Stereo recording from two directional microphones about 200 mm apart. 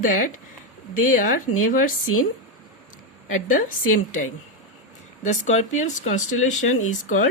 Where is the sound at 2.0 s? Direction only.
90° left.